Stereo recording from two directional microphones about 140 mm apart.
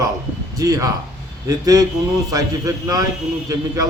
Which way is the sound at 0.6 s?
25° right (ahead or behind).